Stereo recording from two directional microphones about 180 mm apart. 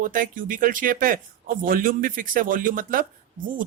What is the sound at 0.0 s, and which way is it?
A man's voice, 50° right (ahead or behind).